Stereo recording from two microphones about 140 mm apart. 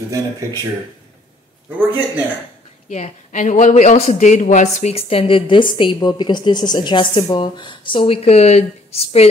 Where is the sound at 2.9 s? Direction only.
60° left (ahead or behind).